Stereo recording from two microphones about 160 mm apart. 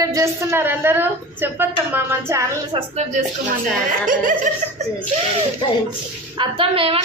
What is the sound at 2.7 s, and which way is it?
Speech, 35° right (ahead or behind).